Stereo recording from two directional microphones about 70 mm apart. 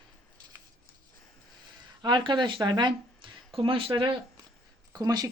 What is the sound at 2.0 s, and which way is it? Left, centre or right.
Speech, right.